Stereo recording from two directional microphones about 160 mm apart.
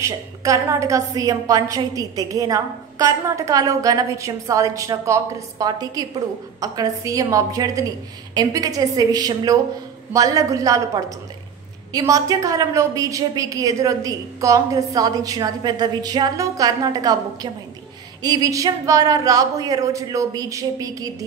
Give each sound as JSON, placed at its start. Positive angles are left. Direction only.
{"t": 0.0, "sound": "a woman's voice", "side_deg": -20}